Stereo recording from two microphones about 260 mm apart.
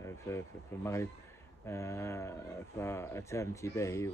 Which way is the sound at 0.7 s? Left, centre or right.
Centre.